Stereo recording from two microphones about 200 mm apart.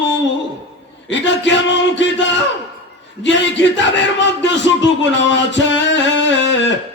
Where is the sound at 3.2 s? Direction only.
65° left (ahead or behind).